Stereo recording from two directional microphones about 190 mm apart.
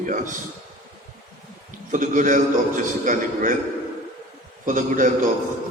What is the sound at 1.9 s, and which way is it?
A man's voice, 40° right (ahead or behind).